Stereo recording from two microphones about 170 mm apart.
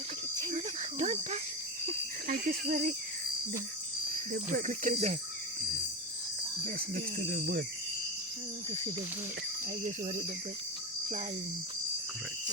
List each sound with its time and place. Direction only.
0.5 s cricket: 40° right (ahead or behind)
2.2 s speech: 55° right (ahead or behind)
4.3 s speech: 50° right (ahead or behind)
6.7 s speech: 60° right (ahead or behind)